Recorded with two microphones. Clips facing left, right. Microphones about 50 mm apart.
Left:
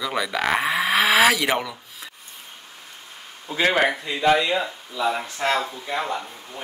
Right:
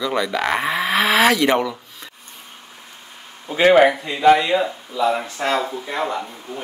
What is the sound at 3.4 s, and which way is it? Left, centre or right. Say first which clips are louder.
Speech: right 6 dB; right.